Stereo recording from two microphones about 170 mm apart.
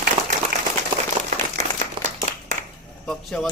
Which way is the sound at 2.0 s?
30° right (ahead or behind).